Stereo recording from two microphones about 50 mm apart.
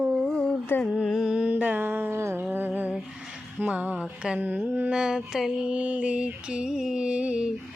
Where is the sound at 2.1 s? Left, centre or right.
Right.